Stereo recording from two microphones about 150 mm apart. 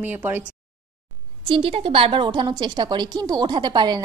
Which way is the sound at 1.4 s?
35° right (ahead or behind).